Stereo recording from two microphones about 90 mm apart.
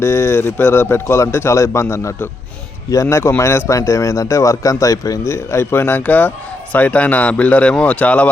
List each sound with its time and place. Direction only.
0.0 s a man's voice: 30° left (ahead or behind)